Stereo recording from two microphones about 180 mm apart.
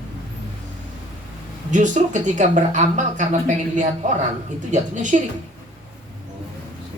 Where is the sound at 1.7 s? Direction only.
45° right (ahead or behind).